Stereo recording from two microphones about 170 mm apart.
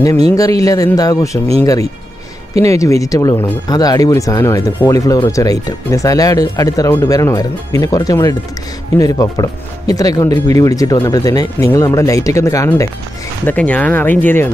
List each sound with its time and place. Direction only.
0.4 s speech: 20° left (ahead or behind)